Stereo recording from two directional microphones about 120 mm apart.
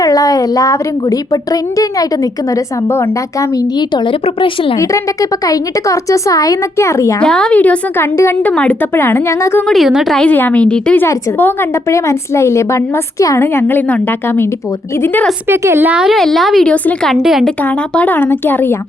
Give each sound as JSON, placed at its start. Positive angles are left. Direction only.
{"t": 0.0, "sound": "a woman's voice", "side_deg": 30}
{"t": 3.5, "sound": "a woman's voice", "side_deg": 40}
{"t": 4.8, "sound": "a woman's voice", "side_deg": 25}
{"t": 7.2, "sound": "a woman's voice", "side_deg": 5}
{"t": 8.1, "sound": "a woman's voice", "side_deg": 25}
{"t": 8.4, "sound": "a woman's voice", "side_deg": 10}
{"t": 9.6, "sound": "a woman's voice", "side_deg": 0}
{"t": 10.2, "sound": "a woman's voice", "side_deg": 15}
{"t": 15.4, "sound": "a woman's voice", "side_deg": -20}
{"t": 17.2, "sound": "a woman's voice", "side_deg": -5}
{"t": 17.6, "sound": "a woman's voice", "side_deg": 10}